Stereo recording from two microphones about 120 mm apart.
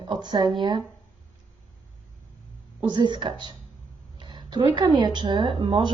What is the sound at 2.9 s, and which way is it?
Speech, 40° right (ahead or behind).